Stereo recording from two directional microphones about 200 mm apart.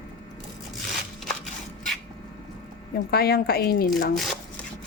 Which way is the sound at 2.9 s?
50° left (ahead or behind).